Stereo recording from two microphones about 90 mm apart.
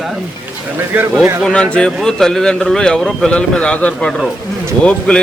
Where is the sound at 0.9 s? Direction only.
20° right (ahead or behind).